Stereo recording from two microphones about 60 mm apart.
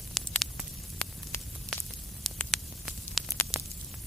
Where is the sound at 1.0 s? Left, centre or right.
Centre.